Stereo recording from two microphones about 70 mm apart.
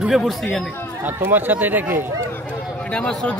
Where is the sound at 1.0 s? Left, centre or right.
Right.